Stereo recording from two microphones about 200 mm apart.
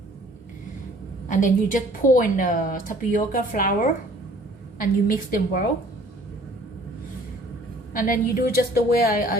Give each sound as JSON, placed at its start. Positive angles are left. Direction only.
{"t": 1.3, "sound": "a woman's voice", "side_deg": 40}
{"t": 4.8, "sound": "a woman's voice", "side_deg": 45}
{"t": 7.9, "sound": "a woman's voice", "side_deg": 45}